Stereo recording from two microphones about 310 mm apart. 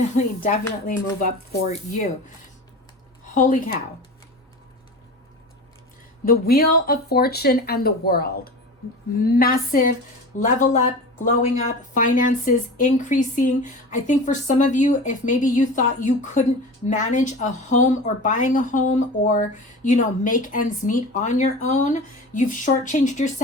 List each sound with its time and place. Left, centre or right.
0.4 s speech: left
3.3 s speech: left
6.2 s speech: left